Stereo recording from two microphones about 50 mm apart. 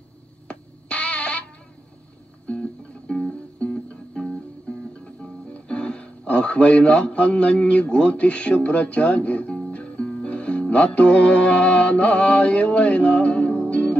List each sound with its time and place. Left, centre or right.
0.5 s music: left
2.4 s music: left
5.5 s speech: left
9.7 s music: left